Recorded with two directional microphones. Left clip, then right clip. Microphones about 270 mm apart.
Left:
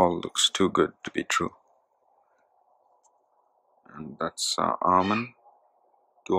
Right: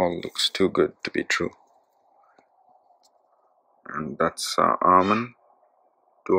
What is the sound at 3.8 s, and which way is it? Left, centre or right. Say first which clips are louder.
Speech: right 8 dB; centre.